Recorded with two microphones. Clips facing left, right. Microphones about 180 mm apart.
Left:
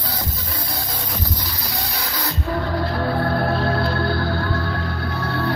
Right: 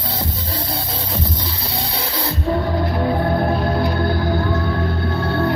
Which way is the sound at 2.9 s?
20° right (ahead or behind).